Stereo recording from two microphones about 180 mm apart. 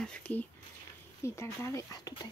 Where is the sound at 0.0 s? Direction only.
5° left (ahead or behind).